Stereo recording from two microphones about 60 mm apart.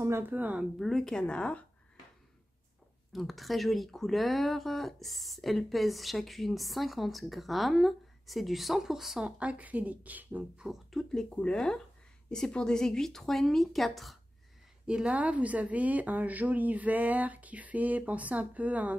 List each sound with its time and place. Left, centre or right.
0.3 s a woman's voice: right
0.7 s speech: centre
3.1 s speech: centre; by 10.4 s right
10.9 s speech: centre
14.9 s a woman's voice: centre